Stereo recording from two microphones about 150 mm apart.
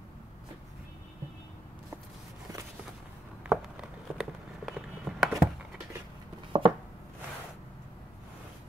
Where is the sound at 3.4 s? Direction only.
5° right (ahead or behind).